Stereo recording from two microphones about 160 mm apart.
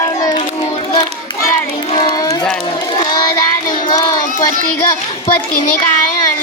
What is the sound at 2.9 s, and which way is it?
Crowd, 30° left (ahead or behind).